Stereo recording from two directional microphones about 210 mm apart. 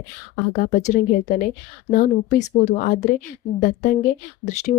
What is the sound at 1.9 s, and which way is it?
Speech, 40° left (ahead or behind).